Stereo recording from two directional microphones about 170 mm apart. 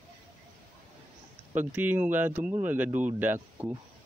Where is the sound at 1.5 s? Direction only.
10° right (ahead or behind).